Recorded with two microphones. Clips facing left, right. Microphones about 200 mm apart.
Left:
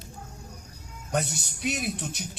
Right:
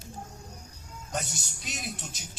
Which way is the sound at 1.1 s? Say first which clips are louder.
Left 7 dB; 60° left (ahead or behind).